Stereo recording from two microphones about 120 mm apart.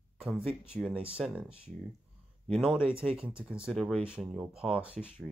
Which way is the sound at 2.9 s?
50° right (ahead or behind).